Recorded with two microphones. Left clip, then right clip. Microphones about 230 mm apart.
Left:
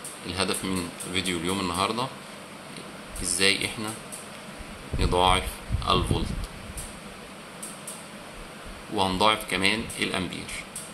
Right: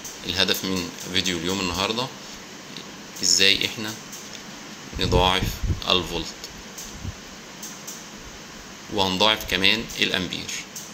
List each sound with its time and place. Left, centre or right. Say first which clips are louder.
0.3 s speech: right 6 dB; centre
3.3 s speech: right 5 dB; centre
4.9 s speech: right 2 dB; centre
8.9 s speech: right 2 dB; centre